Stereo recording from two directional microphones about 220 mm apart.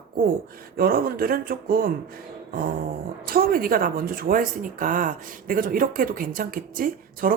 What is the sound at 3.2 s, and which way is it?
Speech, 40° right (ahead or behind).